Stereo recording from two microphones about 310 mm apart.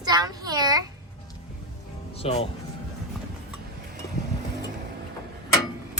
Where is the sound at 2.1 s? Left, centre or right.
Centre.